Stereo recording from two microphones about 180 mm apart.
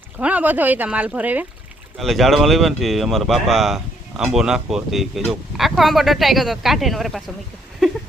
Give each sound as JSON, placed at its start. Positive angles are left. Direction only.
{"t": 0.2, "sound": "speech", "side_deg": -5}